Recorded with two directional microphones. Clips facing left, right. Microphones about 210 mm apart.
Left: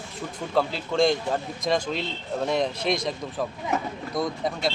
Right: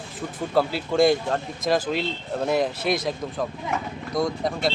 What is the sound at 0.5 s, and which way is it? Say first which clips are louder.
Speech: right 2 dB; 5° right (ahead or behind).